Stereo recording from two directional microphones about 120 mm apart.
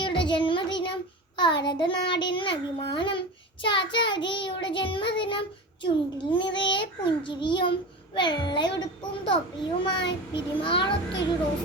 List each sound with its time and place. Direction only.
0.0 s child singing: 40° left (ahead or behind)
9.8 s a child's voice: 45° left (ahead or behind)